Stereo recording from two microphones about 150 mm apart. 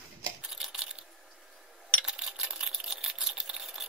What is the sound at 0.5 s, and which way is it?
Coin, 5° right (ahead or behind).